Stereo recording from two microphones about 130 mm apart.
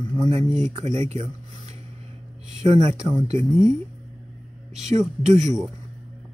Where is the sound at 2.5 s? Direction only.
60° right (ahead or behind).